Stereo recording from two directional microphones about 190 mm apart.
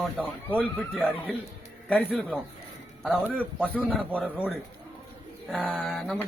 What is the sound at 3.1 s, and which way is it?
A man's voice, 10° right (ahead or behind).